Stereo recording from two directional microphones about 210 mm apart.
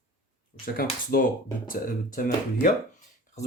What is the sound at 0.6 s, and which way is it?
Speech, 45° left (ahead or behind).